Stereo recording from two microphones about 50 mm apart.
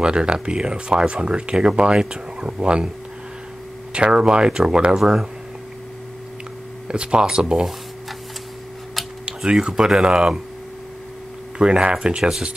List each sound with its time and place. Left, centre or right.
0.0 s speech: centre
3.9 s speech: centre
6.9 s speech: centre
9.2 s speech: centre
11.5 s speech: centre
12.2 s speech: centre